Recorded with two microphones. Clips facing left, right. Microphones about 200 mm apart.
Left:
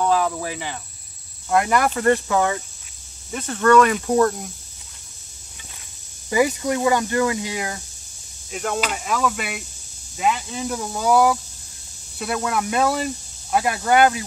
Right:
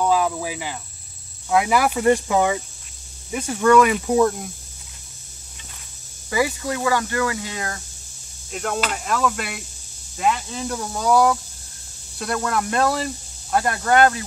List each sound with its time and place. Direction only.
0.0 s cricket: 5° right (ahead or behind)
1.5 s speech: 5° right (ahead or behind)
6.3 s speech: 20° left (ahead or behind)
8.5 s speech: centre (ahead or behind)